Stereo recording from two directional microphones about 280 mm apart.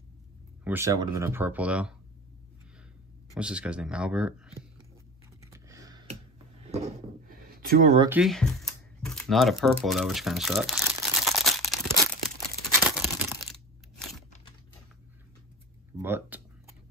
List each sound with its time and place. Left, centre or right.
0.7 s speech: centre
3.3 s speech: centre
5.4 s computer keyboard: centre
6.7 s drawer open or close: right
8.1 s a sound: centre
9.8 s crumpling: centre
12.4 s crunch: centre
16.0 s a sound: centre